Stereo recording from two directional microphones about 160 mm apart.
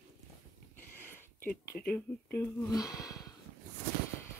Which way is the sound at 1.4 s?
70° left (ahead or behind).